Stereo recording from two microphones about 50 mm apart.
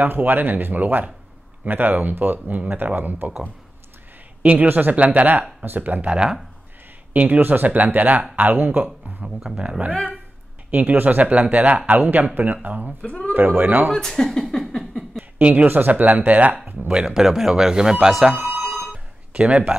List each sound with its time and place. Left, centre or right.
0.0 s speech: right
4.4 s speech: right
6.1 s speech: centre
7.2 s speech: right
9.2 s speech: centre
10.7 s speech: right
13.0 s speech: left
13.3 s speech: right
13.9 s speech: centre
15.6 s speech: right
16.9 s speech: centre
18.7 s telephone bell ringing: centre
19.3 s speech: centre